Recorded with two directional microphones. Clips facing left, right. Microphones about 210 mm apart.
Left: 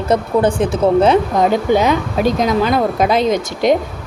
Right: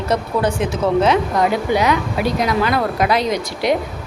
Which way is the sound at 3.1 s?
50° left (ahead or behind).